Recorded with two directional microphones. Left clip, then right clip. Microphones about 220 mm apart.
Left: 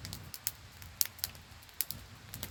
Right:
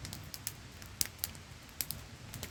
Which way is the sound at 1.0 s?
15° left (ahead or behind).